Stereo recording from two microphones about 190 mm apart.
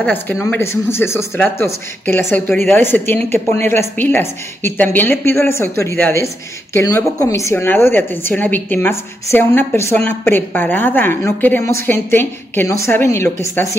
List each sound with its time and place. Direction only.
0.0 s speech: 10° left (ahead or behind)